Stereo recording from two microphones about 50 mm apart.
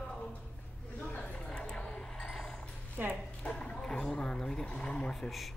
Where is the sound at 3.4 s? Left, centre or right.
Centre.